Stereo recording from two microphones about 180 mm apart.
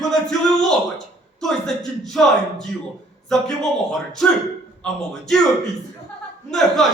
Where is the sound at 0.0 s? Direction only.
5° left (ahead or behind).